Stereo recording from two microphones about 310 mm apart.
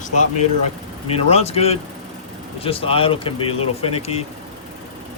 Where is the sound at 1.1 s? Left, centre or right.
Centre.